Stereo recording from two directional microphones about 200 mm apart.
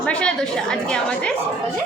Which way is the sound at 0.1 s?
5° left (ahead or behind).